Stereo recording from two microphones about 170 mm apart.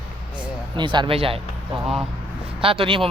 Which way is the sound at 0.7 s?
25° right (ahead or behind).